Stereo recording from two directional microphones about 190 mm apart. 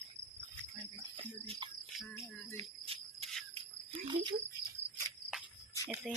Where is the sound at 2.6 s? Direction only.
30° right (ahead or behind).